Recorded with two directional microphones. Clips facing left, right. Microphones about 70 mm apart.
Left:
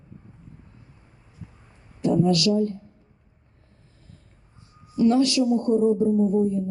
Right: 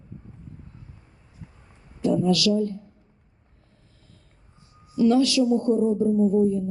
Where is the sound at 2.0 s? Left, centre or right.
Left.